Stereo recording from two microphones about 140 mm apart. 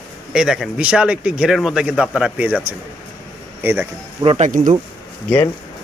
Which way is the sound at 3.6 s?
15° right (ahead or behind).